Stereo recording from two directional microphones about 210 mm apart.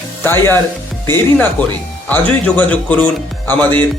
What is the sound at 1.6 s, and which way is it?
Speech, 5° left (ahead or behind).